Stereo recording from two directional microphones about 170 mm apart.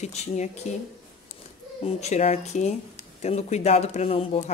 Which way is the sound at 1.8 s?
40° left (ahead or behind).